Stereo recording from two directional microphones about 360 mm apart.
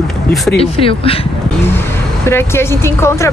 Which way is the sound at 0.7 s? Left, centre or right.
Centre.